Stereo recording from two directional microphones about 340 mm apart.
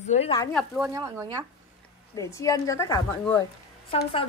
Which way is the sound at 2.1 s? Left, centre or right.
Centre.